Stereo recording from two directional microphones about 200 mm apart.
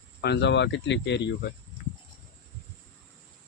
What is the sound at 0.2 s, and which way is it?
Speech, 55° left (ahead or behind).